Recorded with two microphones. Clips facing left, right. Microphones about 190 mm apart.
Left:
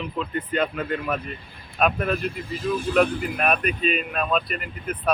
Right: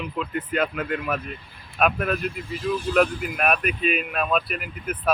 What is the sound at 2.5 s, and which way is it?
Speech, 50° left (ahead or behind).